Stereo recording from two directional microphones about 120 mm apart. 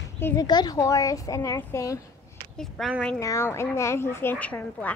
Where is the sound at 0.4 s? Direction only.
35° left (ahead or behind).